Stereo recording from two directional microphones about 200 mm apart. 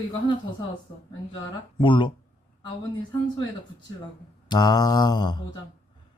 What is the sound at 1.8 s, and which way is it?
Speech, 25° left (ahead or behind).